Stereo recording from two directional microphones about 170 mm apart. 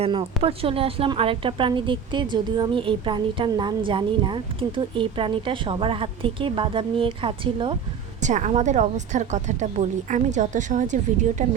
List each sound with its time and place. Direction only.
0.0 s a woman's voice: 30° right (ahead or behind)
8.2 s a woman's voice: 45° right (ahead or behind)